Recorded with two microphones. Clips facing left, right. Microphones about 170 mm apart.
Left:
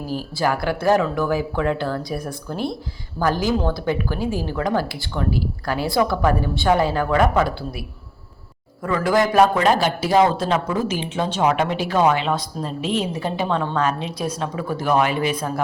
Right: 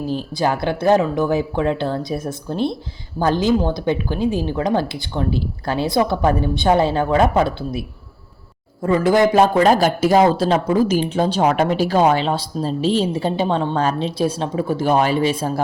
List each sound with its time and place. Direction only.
0.1 s speech: 20° right (ahead or behind)
9.6 s speech: 45° right (ahead or behind)
10.3 s a woman's voice: 35° right (ahead or behind)